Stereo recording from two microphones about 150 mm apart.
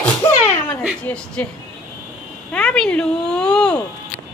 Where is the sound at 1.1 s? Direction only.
10° left (ahead or behind).